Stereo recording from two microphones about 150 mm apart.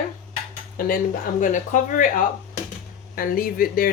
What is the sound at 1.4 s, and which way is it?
Speech, 60° left (ahead or behind).